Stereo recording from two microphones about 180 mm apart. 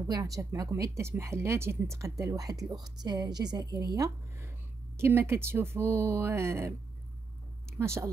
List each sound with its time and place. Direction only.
0.1 s speech: 20° right (ahead or behind)
7.8 s speech: 15° right (ahead or behind)